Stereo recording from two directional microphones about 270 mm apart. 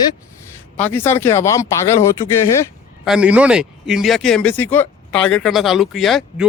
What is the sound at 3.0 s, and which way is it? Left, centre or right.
Speech, centre.